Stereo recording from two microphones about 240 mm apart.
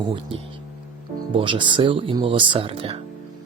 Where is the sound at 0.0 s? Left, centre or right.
Right.